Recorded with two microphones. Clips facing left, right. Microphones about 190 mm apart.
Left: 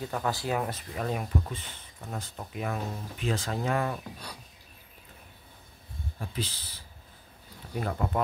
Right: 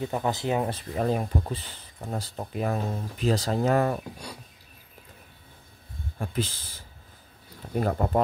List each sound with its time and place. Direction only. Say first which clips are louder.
0.0 s speech: right 4 dB; 20° right (ahead or behind); by 4.0 s 40° right (ahead or behind)
6.1 s speech: right 6 dB; 50° right (ahead or behind)